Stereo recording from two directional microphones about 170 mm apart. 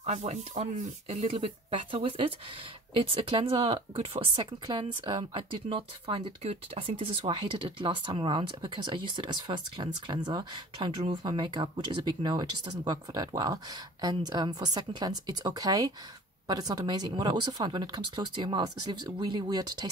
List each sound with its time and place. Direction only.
0.0 s speech: 40° right (ahead or behind); by 19.9 s 25° right (ahead or behind)